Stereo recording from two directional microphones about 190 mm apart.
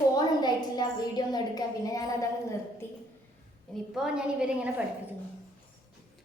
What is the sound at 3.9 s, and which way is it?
Speech, 5° right (ahead or behind).